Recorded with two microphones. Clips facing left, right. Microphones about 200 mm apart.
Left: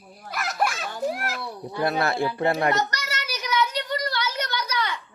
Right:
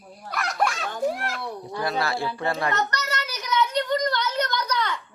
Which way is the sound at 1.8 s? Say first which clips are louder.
Left 3 dB; 55° left (ahead or behind).